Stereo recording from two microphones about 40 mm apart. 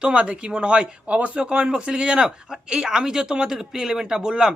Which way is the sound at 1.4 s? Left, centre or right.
Right.